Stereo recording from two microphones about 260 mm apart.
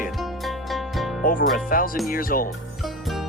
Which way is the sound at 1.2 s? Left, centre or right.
Left.